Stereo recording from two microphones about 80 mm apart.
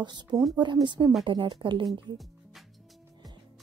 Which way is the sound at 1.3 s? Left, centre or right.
Right.